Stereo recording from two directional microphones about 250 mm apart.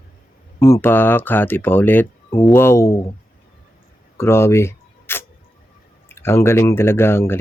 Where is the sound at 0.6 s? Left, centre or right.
Centre.